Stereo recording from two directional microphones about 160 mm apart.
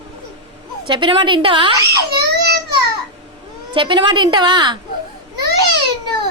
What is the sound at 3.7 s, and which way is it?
A woman's voice, 30° right (ahead or behind).